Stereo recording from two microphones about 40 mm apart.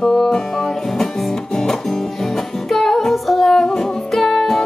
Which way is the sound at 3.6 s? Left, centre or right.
Centre.